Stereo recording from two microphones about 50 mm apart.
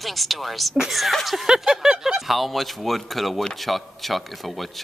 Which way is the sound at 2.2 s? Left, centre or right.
Centre.